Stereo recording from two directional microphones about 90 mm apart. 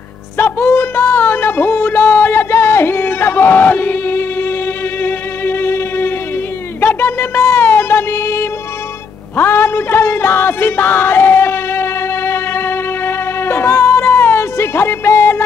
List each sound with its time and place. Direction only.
0.4 s music: 25° left (ahead or behind)